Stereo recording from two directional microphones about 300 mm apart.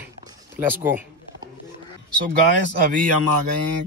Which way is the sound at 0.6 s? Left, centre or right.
Centre.